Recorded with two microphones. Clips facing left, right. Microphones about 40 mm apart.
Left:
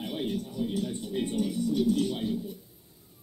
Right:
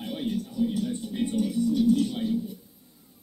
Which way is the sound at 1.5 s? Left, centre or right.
Centre.